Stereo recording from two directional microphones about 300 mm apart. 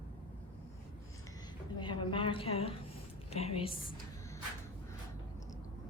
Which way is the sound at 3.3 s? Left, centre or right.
Left.